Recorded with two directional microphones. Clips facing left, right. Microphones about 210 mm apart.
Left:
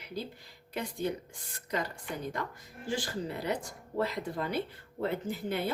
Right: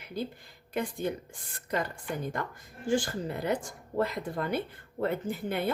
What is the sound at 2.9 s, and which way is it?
Speech, 50° right (ahead or behind).